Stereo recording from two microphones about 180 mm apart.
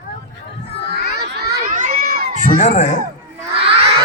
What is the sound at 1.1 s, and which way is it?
Crowd, 60° right (ahead or behind).